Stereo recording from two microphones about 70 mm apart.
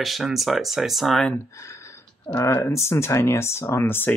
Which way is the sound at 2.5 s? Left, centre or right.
Left.